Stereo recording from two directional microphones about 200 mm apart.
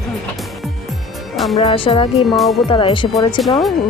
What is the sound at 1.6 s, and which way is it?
Speech, 25° left (ahead or behind).